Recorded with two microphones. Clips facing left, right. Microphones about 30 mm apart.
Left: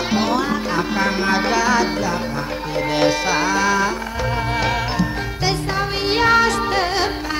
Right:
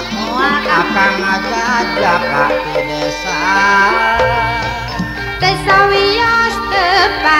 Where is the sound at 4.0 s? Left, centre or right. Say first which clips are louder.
Right 12 dB; right.